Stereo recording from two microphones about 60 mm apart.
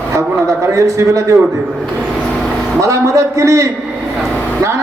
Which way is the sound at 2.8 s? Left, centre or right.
Right.